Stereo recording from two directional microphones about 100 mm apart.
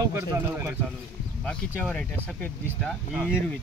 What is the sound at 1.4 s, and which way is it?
Speech, 10° left (ahead or behind).